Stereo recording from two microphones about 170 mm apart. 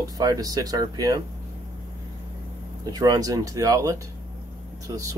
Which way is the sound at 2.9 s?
20° right (ahead or behind).